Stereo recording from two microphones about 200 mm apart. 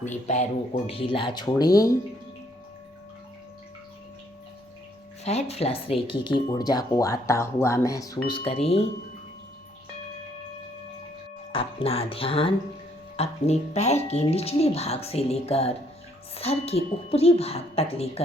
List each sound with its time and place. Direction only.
0.0 s speech: 35° left (ahead or behind); by 1.9 s 20° left (ahead or behind)
5.2 s speech: 30° left (ahead or behind); by 8.2 s 15° left (ahead or behind)
8.3 s speech: 30° left (ahead or behind)
11.5 s speech: 30° left (ahead or behind)